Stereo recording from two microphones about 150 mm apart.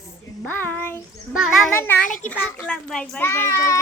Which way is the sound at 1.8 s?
10° left (ahead or behind).